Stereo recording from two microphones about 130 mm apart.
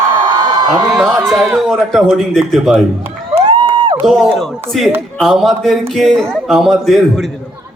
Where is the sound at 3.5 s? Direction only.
35° right (ahead or behind).